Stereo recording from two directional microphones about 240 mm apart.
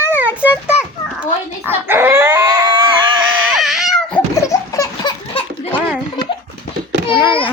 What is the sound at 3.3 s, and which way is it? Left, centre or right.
Cat, centre.